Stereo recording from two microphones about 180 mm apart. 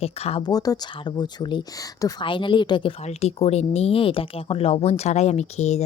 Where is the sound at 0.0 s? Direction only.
35° left (ahead or behind).